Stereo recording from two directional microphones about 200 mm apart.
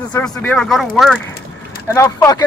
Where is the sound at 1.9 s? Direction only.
15° left (ahead or behind).